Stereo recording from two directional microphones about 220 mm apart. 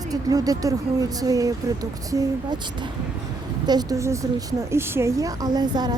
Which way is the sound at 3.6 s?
20° right (ahead or behind).